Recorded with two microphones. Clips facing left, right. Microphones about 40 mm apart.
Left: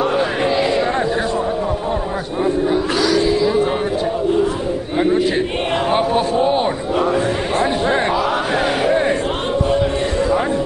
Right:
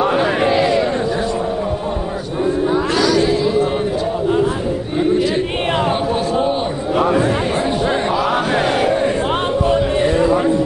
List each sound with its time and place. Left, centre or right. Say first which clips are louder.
0.0 s a sound: right 2 dB; centre
0.8 s a sound: even; centre
2.9 s a sound: right 1 dB; centre
3.4 s speech: even; centre
5.9 s a man's voice: left 2 dB; centre
7.0 s speech: right 3 dB; centre
8.1 s battle cry: right 1 dB; centre
8.9 s battle cry: even; centre
10.0 s a man's voice: right 4 dB; centre